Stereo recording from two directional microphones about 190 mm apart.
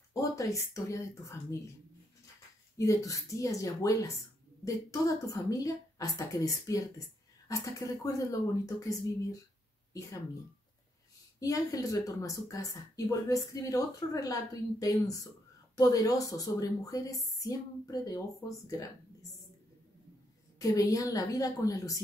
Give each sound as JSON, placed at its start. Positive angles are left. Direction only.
{"t": 0.1, "sound": "speech", "side_deg": 15}
{"t": 2.8, "sound": "a woman's voice", "side_deg": 15}
{"t": 11.3, "sound": "a woman's voice", "side_deg": 20}
{"t": 20.5, "sound": "a woman's voice", "side_deg": 20}